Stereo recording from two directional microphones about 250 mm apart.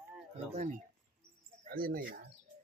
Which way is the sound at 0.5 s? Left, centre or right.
Right.